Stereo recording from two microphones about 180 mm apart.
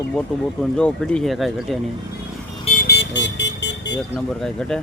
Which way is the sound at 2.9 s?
80° left.